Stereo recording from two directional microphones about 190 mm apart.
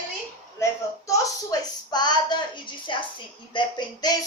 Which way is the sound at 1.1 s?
15° left (ahead or behind).